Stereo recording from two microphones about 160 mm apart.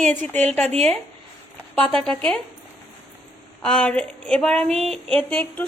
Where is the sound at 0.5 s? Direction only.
40° right (ahead or behind).